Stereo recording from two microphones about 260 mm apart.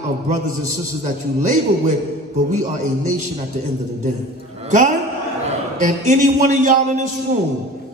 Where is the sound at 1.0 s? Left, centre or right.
Right.